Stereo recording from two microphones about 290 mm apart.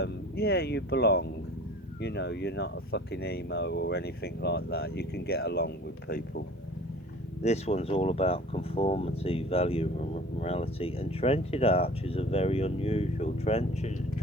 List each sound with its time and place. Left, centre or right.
0.0 s speech: left
7.4 s speech: left